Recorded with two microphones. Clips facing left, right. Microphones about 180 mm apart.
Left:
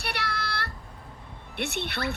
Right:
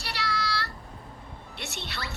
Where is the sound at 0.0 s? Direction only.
60° left (ahead or behind).